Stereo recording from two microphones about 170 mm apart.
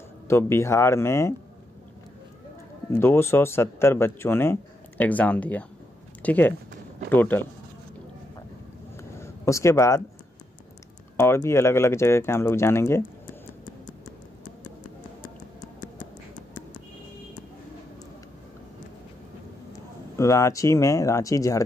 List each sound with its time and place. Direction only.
0.3 s speech: 15° left (ahead or behind)
2.9 s speech: 15° left (ahead or behind)
8.9 s a sound: 15° left (ahead or behind)
11.1 s speech: 15° left (ahead or behind)
20.2 s speech: 15° left (ahead or behind)